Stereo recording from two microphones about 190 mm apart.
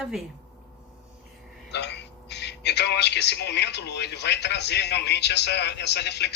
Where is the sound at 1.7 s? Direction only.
65° left (ahead or behind).